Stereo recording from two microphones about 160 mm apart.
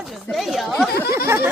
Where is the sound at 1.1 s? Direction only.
15° right (ahead or behind).